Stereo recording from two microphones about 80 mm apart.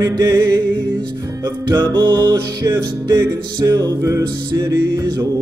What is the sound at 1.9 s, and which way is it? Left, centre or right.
Music, right.